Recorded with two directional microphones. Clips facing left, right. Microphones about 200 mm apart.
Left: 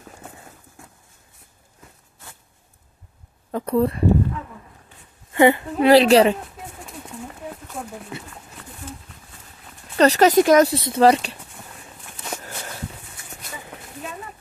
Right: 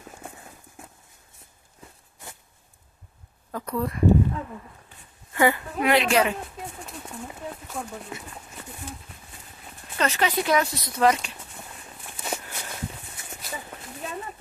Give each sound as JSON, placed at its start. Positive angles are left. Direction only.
{"t": 3.5, "sound": "speech", "side_deg": 30}
{"t": 5.3, "sound": "a woman's voice", "side_deg": 25}
{"t": 9.9, "sound": "a woman's voice", "side_deg": 40}
{"t": 10.7, "sound": "a woman's voice", "side_deg": 30}
{"t": 12.2, "sound": "walk", "side_deg": -10}